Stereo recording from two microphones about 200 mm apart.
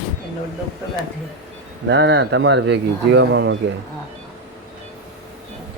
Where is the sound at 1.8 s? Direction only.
65° right (ahead or behind).